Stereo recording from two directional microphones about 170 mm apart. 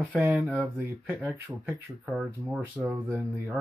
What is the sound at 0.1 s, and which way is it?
Speech, 10° right (ahead or behind).